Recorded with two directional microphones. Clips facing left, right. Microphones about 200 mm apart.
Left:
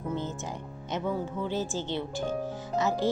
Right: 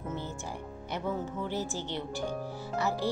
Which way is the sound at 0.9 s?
15° left (ahead or behind).